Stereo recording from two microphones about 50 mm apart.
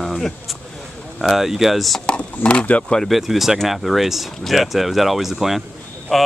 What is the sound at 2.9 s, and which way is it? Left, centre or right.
Speech, centre.